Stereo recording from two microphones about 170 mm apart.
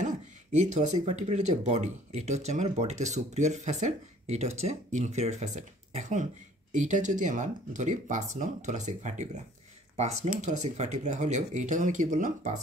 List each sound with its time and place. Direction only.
0.0 s speech: 45° right (ahead or behind)